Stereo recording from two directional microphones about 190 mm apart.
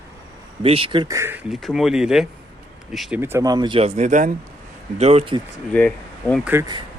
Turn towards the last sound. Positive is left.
turn(degrees=-10)  # may be behind; listen again after turning